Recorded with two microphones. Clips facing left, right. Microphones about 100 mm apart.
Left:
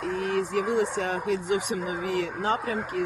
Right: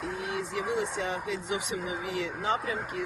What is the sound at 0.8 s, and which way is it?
Speech, 50° left (ahead or behind).